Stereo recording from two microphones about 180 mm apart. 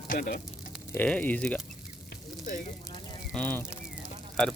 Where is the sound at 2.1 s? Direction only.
45° left (ahead or behind).